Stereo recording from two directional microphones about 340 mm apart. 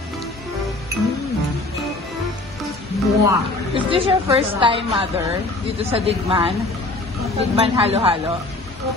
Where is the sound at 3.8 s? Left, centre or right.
Centre.